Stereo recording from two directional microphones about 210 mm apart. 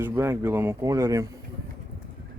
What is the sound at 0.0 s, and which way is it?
Speech, 10° right (ahead or behind).